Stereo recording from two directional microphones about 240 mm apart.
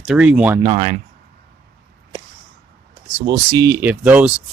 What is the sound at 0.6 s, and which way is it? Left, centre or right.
Speech, right.